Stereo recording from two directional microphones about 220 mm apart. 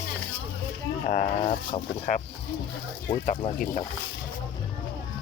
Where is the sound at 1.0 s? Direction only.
40° left (ahead or behind).